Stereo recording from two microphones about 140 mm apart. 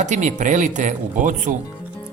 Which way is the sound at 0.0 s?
60° right (ahead or behind).